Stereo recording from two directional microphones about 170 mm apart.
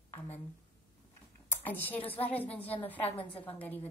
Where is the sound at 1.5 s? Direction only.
10° left (ahead or behind).